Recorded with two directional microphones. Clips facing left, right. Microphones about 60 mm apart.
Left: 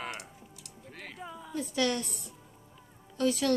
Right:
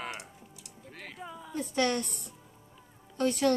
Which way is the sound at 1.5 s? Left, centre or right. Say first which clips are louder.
Right 1 dB; right.